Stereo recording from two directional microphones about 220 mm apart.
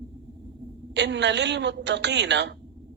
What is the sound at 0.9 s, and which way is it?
Speech, 50° right (ahead or behind).